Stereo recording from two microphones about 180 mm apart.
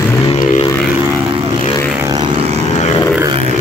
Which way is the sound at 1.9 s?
20° right (ahead or behind).